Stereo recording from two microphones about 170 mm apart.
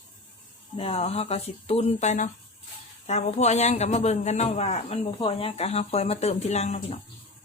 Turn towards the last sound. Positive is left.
turn(degrees=40)  # may be behind; listen again after turning